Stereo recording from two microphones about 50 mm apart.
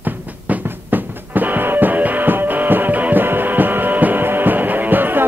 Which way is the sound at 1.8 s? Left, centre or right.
Right.